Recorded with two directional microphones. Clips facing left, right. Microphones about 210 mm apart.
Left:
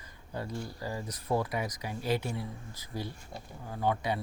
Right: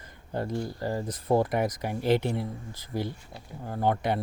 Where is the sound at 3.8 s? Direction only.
65° right (ahead or behind).